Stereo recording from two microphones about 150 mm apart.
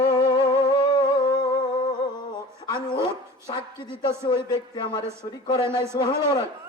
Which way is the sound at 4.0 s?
30° left (ahead or behind).